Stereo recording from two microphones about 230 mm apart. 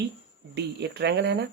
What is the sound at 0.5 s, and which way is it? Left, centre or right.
Speech, right.